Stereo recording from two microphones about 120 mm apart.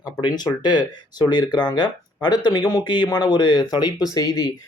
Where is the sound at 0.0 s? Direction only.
35° left (ahead or behind).